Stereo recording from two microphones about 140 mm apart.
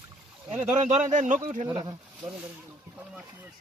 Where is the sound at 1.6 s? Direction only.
40° right (ahead or behind).